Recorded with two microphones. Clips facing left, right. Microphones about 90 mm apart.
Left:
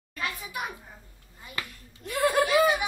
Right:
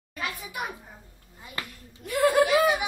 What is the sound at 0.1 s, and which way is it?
Speech, 10° right (ahead or behind).